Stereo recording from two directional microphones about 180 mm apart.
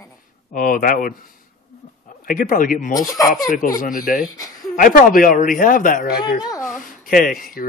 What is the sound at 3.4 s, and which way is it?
Speech, 50° left (ahead or behind).